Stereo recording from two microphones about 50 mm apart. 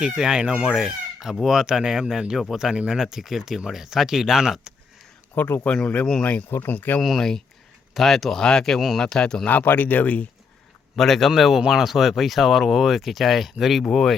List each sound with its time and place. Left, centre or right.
0.0 s speech: centre
5.3 s speech: left
5.6 s speech: centre
6.7 s speech: left
7.0 s speech: centre
9.5 s speech: left
10.9 s speech: centre